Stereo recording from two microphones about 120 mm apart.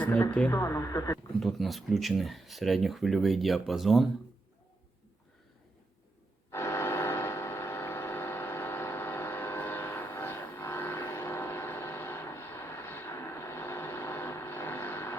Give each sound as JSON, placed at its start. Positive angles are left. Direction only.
{"t": 0.0, "sound": "speech", "side_deg": 10}
{"t": 0.5, "sound": "speech", "side_deg": 25}
{"t": 1.4, "sound": "speech", "side_deg": 0}
{"t": 6.5, "sound": "a sound", "side_deg": 20}